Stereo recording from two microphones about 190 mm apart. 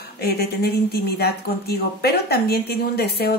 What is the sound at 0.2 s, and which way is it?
Speech, 60° left (ahead or behind).